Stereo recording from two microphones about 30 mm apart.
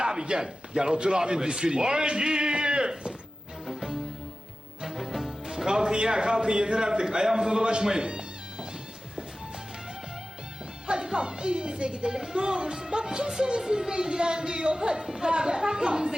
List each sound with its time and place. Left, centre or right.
0.0 s a sound: right
0.7 s a man's voice: right
3.7 s music: centre
5.6 s a man's voice: right
10.8 s speech: right
12.1 s a man's voice: right
15.0 s a man's voice: centre